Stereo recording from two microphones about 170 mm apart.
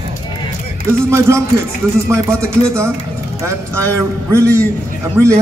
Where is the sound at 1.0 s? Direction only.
15° right (ahead or behind).